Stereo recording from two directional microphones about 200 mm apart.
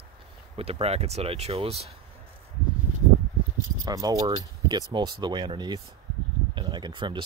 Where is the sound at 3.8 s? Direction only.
20° right (ahead or behind).